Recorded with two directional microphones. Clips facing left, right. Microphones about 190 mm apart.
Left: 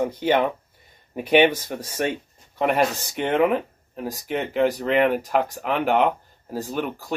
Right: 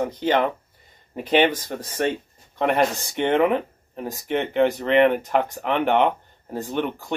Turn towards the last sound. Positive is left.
turn(degrees=5)  # may be behind; listen again after turning